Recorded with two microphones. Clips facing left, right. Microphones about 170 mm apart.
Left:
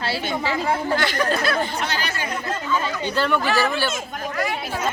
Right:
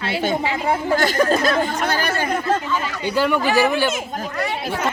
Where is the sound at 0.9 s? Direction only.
45° right (ahead or behind).